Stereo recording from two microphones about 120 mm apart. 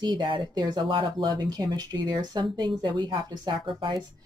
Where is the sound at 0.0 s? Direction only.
40° right (ahead or behind).